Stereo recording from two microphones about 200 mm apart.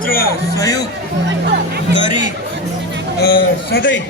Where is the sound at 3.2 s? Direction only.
50° left (ahead or behind).